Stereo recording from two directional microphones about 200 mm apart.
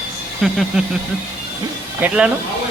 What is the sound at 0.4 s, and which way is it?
Speech, 5° right (ahead or behind).